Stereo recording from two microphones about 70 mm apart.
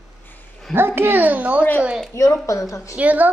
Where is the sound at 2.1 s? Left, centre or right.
Left.